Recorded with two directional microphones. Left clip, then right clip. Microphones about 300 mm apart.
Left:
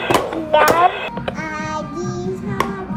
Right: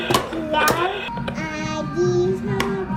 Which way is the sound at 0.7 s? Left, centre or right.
Left.